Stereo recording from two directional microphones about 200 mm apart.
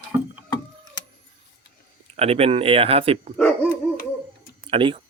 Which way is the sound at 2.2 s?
30° right (ahead or behind).